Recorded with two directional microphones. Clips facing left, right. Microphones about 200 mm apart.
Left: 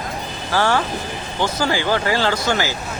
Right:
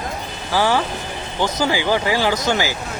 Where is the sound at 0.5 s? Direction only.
10° right (ahead or behind).